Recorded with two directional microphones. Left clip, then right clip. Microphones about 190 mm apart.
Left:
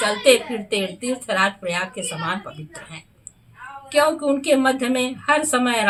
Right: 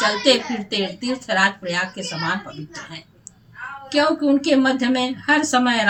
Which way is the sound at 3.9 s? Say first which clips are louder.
Even; 15° left (ahead or behind).